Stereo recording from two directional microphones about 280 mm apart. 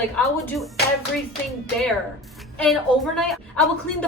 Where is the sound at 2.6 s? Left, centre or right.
Centre.